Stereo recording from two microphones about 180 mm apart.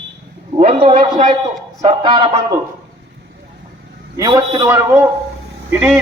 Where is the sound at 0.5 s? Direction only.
35° right (ahead or behind).